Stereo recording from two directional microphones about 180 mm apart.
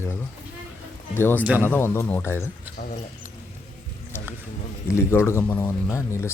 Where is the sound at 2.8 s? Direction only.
50° left (ahead or behind).